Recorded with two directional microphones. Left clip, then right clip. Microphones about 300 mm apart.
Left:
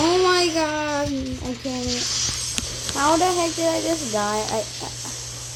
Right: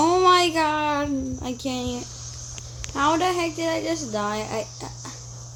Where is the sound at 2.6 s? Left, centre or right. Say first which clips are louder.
Even; centre.